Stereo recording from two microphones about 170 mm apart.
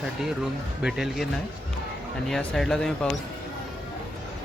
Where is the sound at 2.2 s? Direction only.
Centre (ahead or behind).